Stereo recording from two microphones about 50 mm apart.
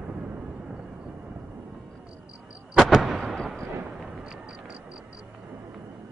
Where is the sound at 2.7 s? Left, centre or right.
Centre.